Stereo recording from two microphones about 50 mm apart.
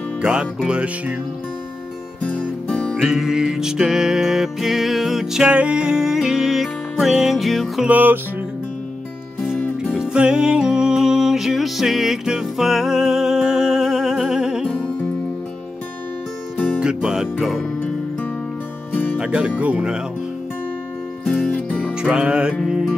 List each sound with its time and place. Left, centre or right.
0.2 s music: centre
2.2 s music: left
3.0 s music: centre
5.5 s music: right; by 7.8 s centre
7.9 s music: right
9.6 s music: left
9.9 s music: centre
16.5 s music: left
16.8 s speech: centre
18.9 s music: left
19.1 s speech: right
21.5 s music: left
22.0 s music: centre